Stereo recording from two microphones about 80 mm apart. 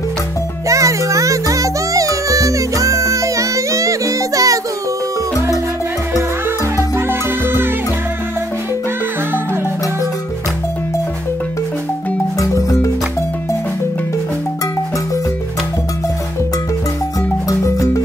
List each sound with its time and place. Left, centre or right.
0.7 s music: right
7.0 s music: right
12.4 s music: left
17.5 s music: left